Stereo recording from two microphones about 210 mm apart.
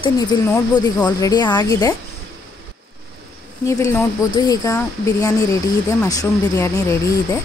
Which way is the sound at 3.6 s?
15° left (ahead or behind).